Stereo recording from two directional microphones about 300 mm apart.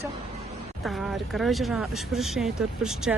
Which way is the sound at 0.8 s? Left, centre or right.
Centre.